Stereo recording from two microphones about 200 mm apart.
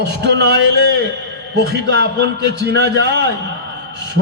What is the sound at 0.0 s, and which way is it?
Speech, 60° right (ahead or behind).